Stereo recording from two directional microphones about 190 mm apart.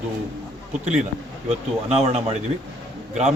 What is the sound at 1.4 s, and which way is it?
Speech, 35° right (ahead or behind).